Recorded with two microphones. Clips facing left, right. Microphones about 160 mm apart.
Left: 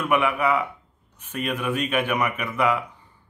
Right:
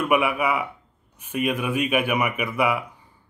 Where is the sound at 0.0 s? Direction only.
10° right (ahead or behind).